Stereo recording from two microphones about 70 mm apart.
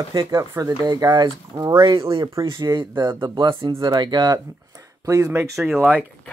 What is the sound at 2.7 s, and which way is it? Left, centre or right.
Speech, right.